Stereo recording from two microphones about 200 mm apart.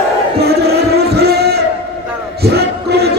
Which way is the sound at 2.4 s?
55° right (ahead or behind).